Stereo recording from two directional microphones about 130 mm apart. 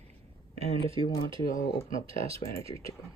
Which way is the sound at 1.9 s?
45° right (ahead or behind).